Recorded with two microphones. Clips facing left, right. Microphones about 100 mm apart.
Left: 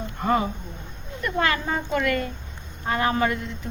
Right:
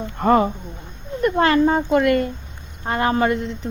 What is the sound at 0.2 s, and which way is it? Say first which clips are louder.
Speech: right 7 dB; 45° right (ahead or behind).